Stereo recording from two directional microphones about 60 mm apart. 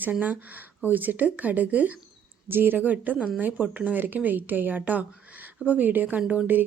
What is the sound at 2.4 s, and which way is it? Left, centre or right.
A woman's voice, right.